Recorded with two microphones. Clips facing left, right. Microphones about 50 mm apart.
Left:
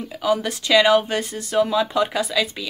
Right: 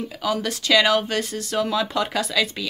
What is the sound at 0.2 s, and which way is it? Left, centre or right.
Speech, left.